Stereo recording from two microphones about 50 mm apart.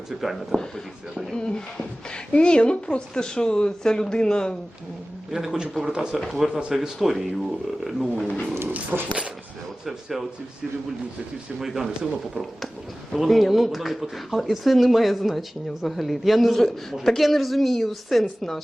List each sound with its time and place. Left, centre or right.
0.2 s speech: centre
1.4 s a woman's voice: centre
5.3 s speech: centre
6.1 s speech: centre
8.2 s speech: left
8.7 s speech: right
9.8 s speech: centre
11.6 s speech: centre